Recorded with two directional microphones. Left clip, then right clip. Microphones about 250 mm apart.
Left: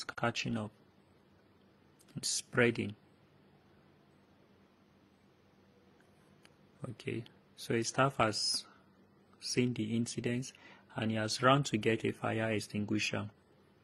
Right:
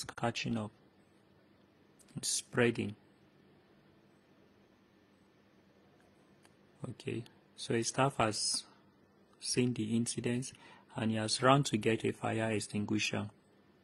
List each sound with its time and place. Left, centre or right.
0.0 s speech: centre
2.1 s speech: centre
6.8 s speech: centre